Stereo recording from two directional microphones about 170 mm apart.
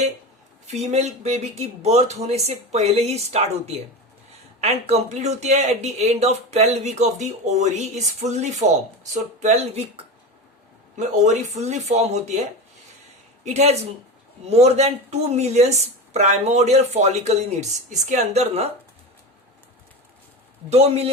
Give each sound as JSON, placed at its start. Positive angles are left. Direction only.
{"t": 0.7, "sound": "speech", "side_deg": -40}
{"t": 11.2, "sound": "speech", "side_deg": -45}
{"t": 20.7, "sound": "speech", "side_deg": -40}